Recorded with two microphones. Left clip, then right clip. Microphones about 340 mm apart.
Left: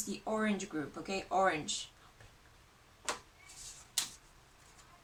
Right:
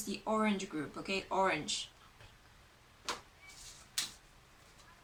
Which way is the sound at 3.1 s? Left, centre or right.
Left.